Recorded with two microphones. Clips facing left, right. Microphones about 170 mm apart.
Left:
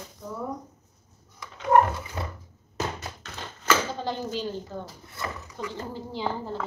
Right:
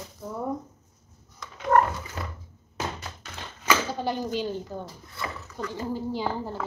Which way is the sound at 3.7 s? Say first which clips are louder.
Even; 15° right (ahead or behind).